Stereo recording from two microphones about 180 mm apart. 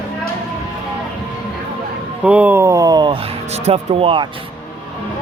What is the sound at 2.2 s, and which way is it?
Speech, 10° right (ahead or behind).